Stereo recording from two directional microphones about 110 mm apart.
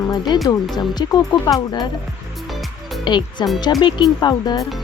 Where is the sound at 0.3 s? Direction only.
40° left (ahead or behind).